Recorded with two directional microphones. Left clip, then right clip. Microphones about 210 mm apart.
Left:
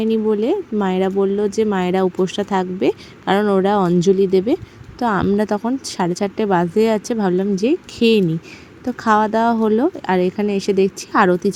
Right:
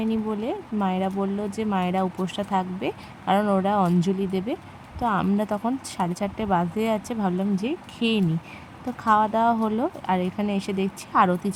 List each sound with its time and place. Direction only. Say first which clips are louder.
0.0 s speech: left 10 dB; 20° left (ahead or behind)